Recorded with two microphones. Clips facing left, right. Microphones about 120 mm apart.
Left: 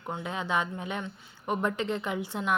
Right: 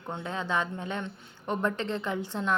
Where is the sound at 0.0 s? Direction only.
10° left (ahead or behind).